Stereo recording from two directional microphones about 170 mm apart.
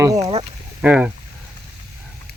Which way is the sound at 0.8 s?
5° right (ahead or behind).